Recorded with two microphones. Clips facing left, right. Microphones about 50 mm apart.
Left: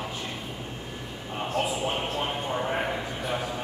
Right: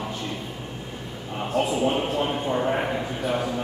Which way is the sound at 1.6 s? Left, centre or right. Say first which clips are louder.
Right 7 dB; centre.